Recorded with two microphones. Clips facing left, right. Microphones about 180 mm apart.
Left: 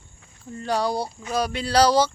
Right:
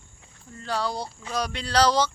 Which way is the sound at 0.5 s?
15° left (ahead or behind).